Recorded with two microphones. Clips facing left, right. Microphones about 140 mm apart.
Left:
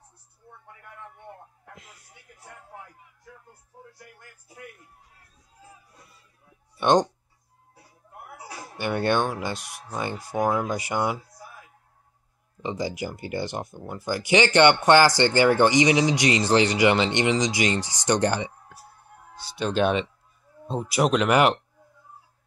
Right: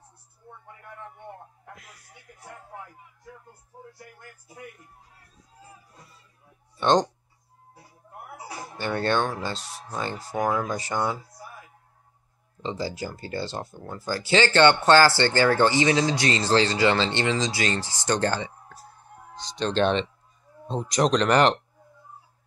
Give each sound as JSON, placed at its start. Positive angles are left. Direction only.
{"t": 1.8, "sound": "a sound", "side_deg": 25}
{"t": 6.8, "sound": "speech", "side_deg": 10}
{"t": 8.7, "sound": "speech", "side_deg": 15}
{"t": 12.6, "sound": "speech", "side_deg": 15}